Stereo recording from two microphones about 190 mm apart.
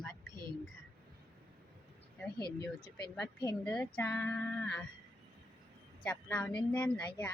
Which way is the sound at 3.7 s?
5° left (ahead or behind).